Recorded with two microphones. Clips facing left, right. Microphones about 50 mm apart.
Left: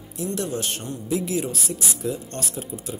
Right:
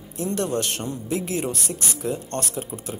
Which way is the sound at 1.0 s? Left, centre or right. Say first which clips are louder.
Left 2 dB; right.